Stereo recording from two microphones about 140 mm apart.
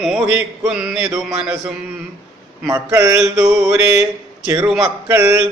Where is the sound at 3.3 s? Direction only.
20° right (ahead or behind).